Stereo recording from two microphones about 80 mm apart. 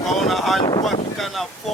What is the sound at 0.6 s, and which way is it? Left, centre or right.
Speech, left.